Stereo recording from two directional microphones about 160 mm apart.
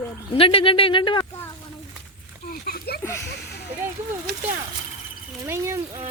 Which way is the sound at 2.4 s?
65° left (ahead or behind).